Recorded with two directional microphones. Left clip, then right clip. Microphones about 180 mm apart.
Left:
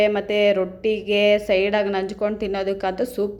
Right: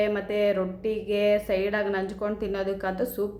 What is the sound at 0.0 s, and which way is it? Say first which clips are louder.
A woman's voice: left 6 dB; 20° left (ahead or behind).